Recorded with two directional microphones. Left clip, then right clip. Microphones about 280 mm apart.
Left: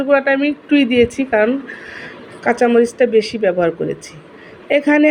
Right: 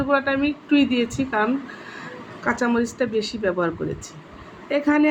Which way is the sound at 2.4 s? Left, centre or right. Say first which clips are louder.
Left 9 dB; centre.